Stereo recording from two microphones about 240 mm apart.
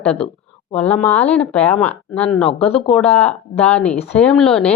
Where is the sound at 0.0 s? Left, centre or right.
Centre.